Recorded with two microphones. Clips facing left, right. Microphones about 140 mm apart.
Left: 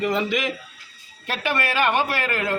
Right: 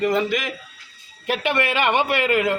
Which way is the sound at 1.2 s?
15° right (ahead or behind).